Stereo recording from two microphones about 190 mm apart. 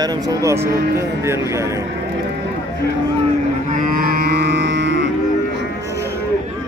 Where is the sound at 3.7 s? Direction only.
50° right (ahead or behind); by 5.1 s 65° right (ahead or behind).